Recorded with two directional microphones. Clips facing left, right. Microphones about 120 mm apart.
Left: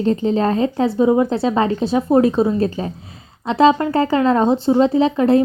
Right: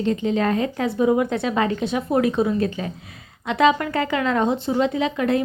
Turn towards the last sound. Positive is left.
turn(degrees=30)  # may be behind; listen again after turning